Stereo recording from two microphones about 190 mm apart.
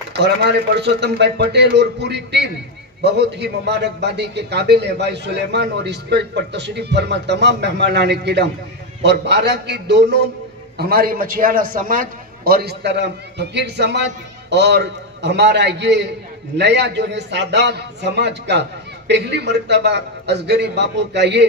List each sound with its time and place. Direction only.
0.1 s a man's voice: 60° right (ahead or behind)
10.8 s a man's voice: 55° right (ahead or behind)